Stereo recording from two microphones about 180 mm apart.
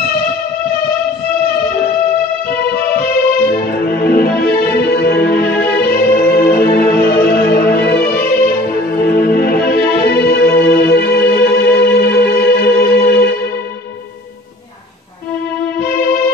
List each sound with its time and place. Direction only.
2.9 s music: 55° left (ahead or behind)